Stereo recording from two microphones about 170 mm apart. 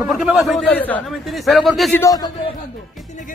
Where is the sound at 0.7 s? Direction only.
10° left (ahead or behind).